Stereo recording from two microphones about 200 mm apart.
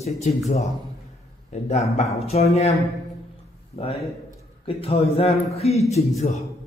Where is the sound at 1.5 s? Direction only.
35° left (ahead or behind).